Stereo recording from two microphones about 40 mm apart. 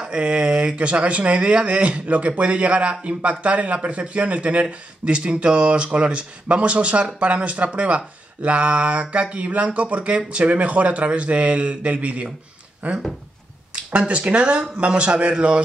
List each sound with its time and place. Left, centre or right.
0.0 s speech: right
13.9 s speech: right